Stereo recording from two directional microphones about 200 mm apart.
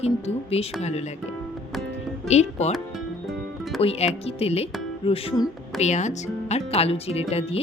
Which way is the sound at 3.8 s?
30° left (ahead or behind).